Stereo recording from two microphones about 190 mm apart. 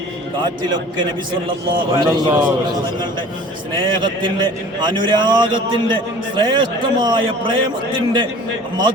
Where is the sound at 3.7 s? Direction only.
25° right (ahead or behind).